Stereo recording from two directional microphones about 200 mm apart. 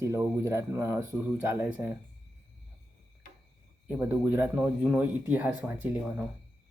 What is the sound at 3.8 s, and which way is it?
A man's voice, 10° right (ahead or behind).